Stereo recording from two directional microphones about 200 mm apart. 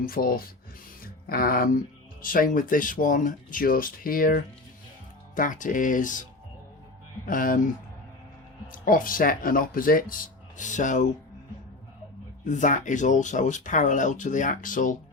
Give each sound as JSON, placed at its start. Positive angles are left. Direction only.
{"t": 0.0, "sound": "speech", "side_deg": 45}
{"t": 7.3, "sound": "speech", "side_deg": 45}
{"t": 8.6, "sound": "speech", "side_deg": 45}
{"t": 12.5, "sound": "speech", "side_deg": 40}